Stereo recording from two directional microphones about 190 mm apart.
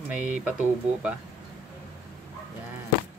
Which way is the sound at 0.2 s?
40° right (ahead or behind).